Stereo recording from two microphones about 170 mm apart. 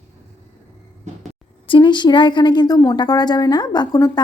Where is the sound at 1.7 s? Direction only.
30° left (ahead or behind).